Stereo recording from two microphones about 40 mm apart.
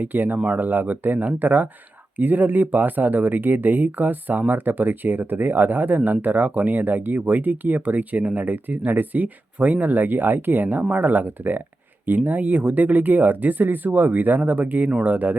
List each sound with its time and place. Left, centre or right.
0.0 s speech: right